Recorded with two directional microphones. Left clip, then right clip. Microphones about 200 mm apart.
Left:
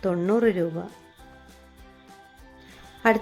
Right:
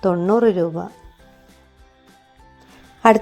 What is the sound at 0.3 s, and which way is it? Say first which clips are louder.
Speech: right 5 dB; centre (ahead or behind).